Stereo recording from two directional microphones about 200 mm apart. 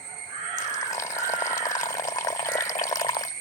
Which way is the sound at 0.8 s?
15° left (ahead or behind).